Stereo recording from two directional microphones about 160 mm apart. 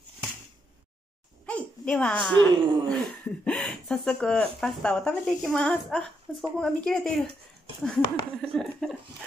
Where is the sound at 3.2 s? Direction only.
10° left (ahead or behind).